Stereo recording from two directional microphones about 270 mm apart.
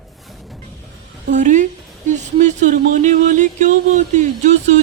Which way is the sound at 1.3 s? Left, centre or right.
Right.